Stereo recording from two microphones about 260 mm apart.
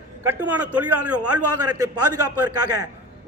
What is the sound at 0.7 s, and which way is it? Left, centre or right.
A man's voice, right.